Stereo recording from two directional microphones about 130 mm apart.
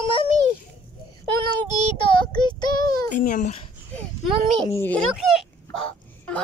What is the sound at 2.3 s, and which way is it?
Speech, 35° left (ahead or behind).